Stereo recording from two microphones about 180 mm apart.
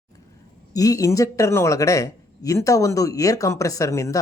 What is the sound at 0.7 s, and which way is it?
Speech, 20° left (ahead or behind).